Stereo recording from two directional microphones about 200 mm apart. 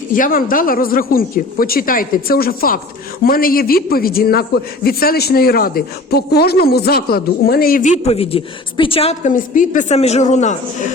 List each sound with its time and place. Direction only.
0.1 s a man's voice: 45° left (ahead or behind)